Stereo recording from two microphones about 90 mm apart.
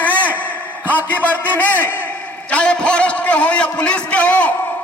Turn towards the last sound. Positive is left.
turn(degrees=15)  # may be behind; listen again after turning